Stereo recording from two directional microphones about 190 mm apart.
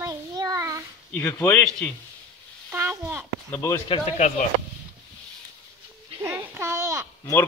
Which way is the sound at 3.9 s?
35° left (ahead or behind).